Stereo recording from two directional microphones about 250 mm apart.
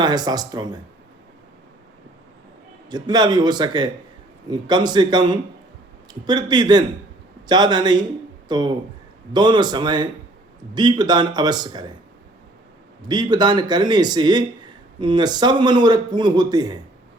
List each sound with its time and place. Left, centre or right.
0.0 s speech: centre
2.9 s speech: centre
13.0 s speech: centre